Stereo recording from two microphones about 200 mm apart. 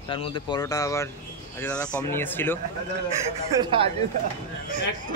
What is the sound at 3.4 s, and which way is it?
Speech, 25° right (ahead or behind).